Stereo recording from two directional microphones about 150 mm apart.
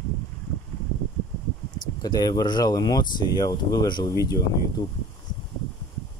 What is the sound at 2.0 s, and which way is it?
Speech, 25° left (ahead or behind).